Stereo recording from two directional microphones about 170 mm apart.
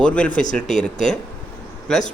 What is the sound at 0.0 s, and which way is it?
Speech, 5° left (ahead or behind).